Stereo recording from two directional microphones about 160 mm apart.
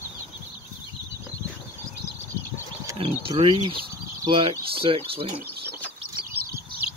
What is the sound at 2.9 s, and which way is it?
Bird, 35° right (ahead or behind).